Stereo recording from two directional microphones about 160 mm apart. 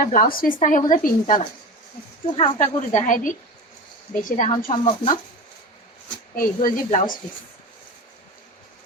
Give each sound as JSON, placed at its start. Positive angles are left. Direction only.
{"t": 0.0, "sound": "speech", "side_deg": 60}
{"t": 2.2, "sound": "speech", "side_deg": 35}
{"t": 2.9, "sound": "a woman's voice", "side_deg": 55}
{"t": 4.5, "sound": "speech", "side_deg": 30}
{"t": 6.3, "sound": "speech", "side_deg": 60}